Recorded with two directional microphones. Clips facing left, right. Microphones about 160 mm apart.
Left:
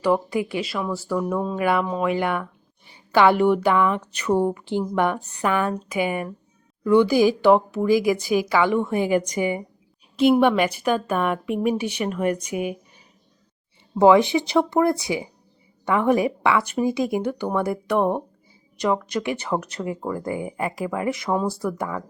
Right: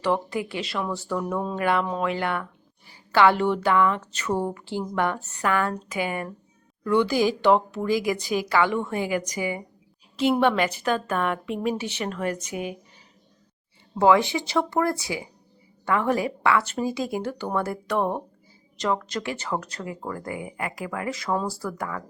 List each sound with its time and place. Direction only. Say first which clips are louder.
0.0 s speech: left 4 dB; 10° left (ahead or behind)
13.9 s speech: left 4 dB; 15° left (ahead or behind)
20.3 s speech: left 5 dB; 30° left (ahead or behind)